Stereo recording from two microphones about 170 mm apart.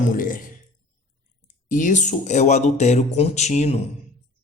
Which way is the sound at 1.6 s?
50° left (ahead or behind).